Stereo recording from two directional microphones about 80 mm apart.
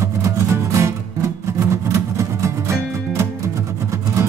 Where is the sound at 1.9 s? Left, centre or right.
Right.